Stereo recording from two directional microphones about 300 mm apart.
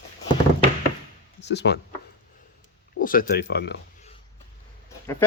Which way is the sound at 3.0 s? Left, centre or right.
Left.